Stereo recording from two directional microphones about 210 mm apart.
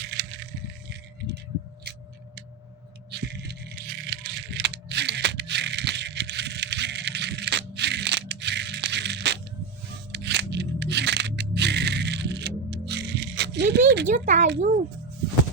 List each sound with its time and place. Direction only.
0.0 s a sound: 55° right (ahead or behind)
3.1 s rattle: 50° right (ahead or behind)
10.1 s music: 55° right (ahead or behind)
14.1 s speech: 40° right (ahead or behind)